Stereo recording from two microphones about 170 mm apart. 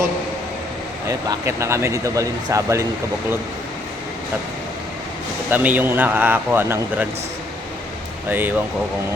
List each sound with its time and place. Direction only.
1.0 s speech: 15° right (ahead or behind)
5.5 s speech: 10° right (ahead or behind)
8.3 s speech: 10° right (ahead or behind)